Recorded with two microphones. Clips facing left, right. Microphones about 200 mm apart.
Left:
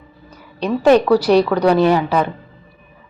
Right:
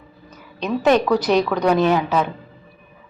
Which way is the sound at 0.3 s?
10° left (ahead or behind).